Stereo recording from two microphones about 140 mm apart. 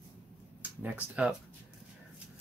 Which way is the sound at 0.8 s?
10° right (ahead or behind).